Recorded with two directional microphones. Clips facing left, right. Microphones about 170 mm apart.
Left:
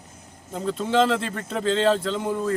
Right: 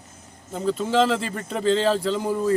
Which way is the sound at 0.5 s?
Centre (ahead or behind).